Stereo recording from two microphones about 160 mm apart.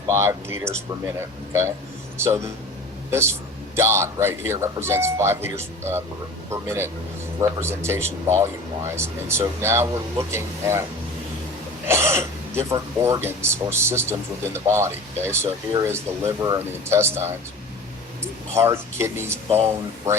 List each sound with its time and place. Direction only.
0.1 s speech: 15° right (ahead or behind)
2.1 s speech: 15° right (ahead or behind)
11.9 s speech: 15° right (ahead or behind)
18.5 s speech: 15° right (ahead or behind)